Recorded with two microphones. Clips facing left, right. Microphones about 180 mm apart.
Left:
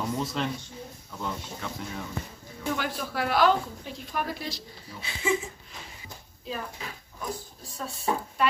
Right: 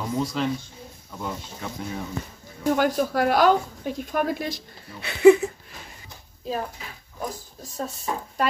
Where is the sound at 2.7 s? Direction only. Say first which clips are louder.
Right 10 dB; 45° right (ahead or behind); by 5.5 s 65° right (ahead or behind).